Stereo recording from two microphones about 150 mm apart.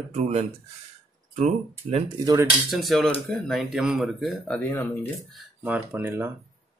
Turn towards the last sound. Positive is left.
turn(degrees=-15)  # may be behind; listen again after turning